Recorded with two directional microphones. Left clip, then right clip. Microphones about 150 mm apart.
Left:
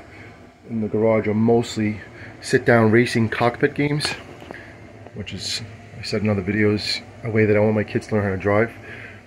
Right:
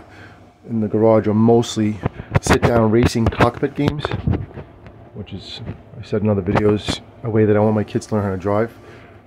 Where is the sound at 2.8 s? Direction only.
5° right (ahead or behind).